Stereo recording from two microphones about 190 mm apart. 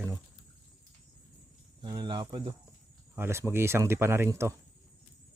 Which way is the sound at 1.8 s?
25° right (ahead or behind).